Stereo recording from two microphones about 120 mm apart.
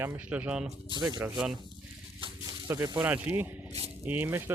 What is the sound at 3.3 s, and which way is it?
Speech, 15° right (ahead or behind).